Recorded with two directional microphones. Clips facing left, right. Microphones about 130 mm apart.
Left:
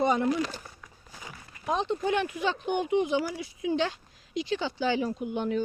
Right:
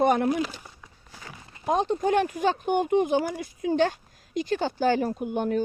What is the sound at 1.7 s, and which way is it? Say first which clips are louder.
Speech: right 4 dB; 45° right (ahead or behind).